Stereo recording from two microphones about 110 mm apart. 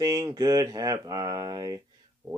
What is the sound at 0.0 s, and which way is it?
Speech, 35° right (ahead or behind).